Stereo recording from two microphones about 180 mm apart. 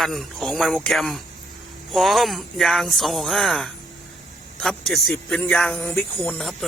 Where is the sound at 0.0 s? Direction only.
Centre (ahead or behind).